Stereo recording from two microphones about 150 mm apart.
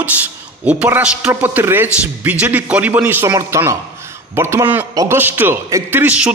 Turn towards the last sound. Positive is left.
turn(degrees=-10)  # may be behind; listen again after turning